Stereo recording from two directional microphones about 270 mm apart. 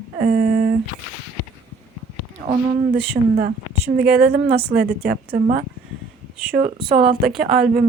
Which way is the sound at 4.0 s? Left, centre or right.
Right.